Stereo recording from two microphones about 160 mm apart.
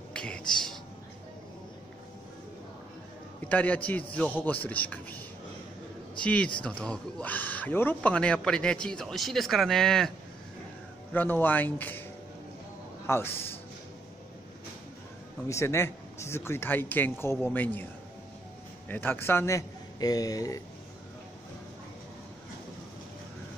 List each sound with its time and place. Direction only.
0.1 s a sound: 5° left (ahead or behind)
3.4 s speech: 10° left (ahead or behind)
6.1 s a man's voice: 5° left (ahead or behind)
11.1 s speech: 10° left (ahead or behind)
13.0 s a man's voice: 15° left (ahead or behind)
15.4 s speech: 15° left (ahead or behind)
18.9 s a man's voice: 10° left (ahead or behind)